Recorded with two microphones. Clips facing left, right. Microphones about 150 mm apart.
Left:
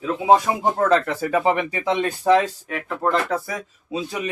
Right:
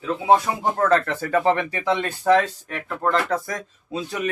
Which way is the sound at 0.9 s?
15° left (ahead or behind).